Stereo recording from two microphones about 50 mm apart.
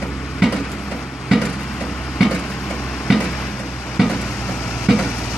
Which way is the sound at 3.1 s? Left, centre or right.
Centre.